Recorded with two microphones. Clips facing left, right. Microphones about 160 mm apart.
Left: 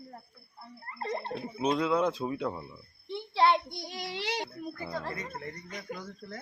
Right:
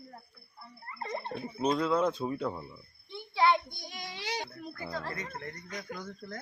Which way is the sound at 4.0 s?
75° left (ahead or behind).